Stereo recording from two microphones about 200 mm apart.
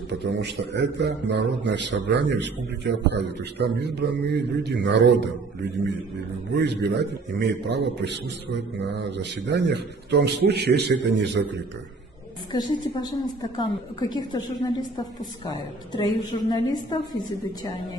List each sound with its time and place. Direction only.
0.2 s a man's voice: 60° right (ahead or behind)
6.5 s a man's voice: 55° right (ahead or behind)
12.5 s a woman's voice: 20° left (ahead or behind)